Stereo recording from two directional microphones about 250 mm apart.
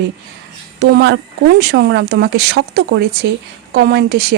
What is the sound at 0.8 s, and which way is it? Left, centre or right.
Speech, right.